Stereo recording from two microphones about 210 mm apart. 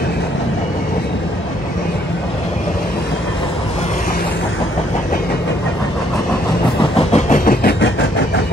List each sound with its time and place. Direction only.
6.8 s train: 30° left (ahead or behind)